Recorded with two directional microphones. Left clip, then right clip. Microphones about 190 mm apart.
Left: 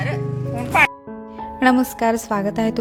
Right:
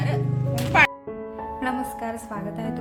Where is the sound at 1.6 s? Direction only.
50° left (ahead or behind).